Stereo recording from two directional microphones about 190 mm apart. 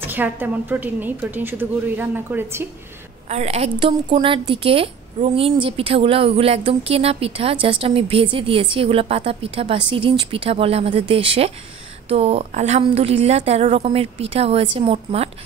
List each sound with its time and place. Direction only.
0.0 s a woman's voice: 10° right (ahead or behind)
3.3 s a woman's voice: 35° right (ahead or behind)